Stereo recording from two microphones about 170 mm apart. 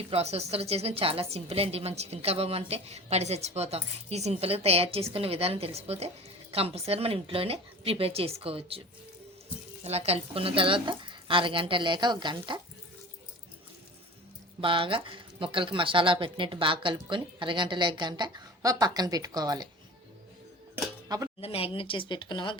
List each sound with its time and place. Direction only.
0.1 s a woman's voice: 40° right (ahead or behind)
9.8 s a woman's voice: 40° right (ahead or behind)
14.6 s speech: 30° right (ahead or behind)
21.4 s speech: 35° left (ahead or behind)